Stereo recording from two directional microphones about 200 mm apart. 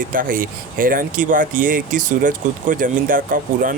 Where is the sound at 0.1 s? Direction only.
45° right (ahead or behind).